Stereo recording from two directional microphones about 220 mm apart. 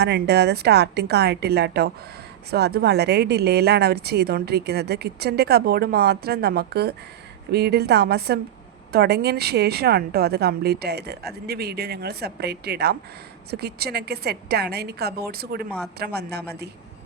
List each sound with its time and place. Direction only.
0.0 s a woman's voice: 50° right (ahead or behind)